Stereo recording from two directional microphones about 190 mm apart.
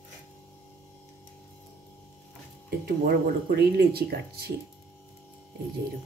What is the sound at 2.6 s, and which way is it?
Speech, 55° right (ahead or behind).